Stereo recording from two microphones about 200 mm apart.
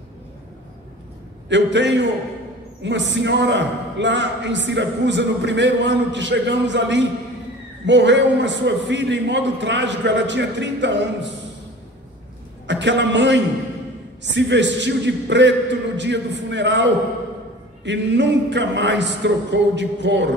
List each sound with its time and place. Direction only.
1.5 s a man's voice: 60° right (ahead or behind)
12.6 s a man's voice: 60° right (ahead or behind)